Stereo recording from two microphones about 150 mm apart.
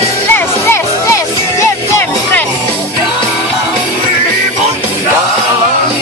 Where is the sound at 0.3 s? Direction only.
20° left (ahead or behind).